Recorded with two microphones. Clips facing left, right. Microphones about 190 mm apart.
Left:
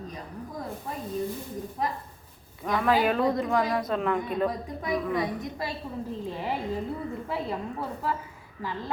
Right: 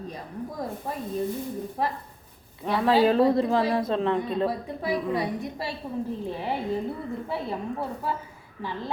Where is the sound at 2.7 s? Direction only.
30° right (ahead or behind).